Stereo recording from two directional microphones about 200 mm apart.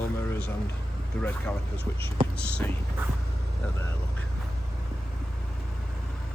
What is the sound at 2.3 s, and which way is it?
Speech, 5° left (ahead or behind).